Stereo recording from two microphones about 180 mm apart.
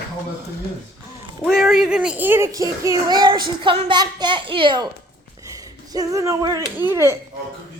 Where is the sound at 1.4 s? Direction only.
Centre (ahead or behind); by 6.6 s 20° right (ahead or behind).